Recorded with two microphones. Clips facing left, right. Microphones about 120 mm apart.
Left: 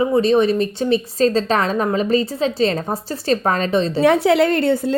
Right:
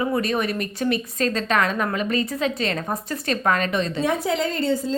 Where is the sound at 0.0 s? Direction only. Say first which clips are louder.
Left 8 dB; 25° left (ahead or behind).